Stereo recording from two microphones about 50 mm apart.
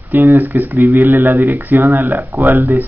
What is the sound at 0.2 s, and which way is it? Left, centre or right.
Speech, right.